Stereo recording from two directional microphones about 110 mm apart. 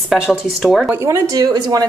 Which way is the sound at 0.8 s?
20° right (ahead or behind).